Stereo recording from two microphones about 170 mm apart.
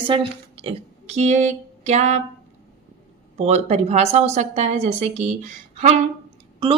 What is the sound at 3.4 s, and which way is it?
Speech, 40° right (ahead or behind).